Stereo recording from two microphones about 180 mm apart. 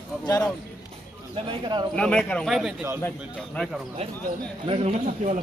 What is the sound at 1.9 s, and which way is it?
A man's voice, 5° left (ahead or behind).